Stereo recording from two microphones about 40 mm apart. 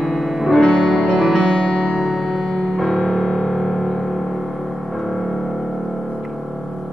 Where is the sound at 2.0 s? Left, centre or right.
Centre.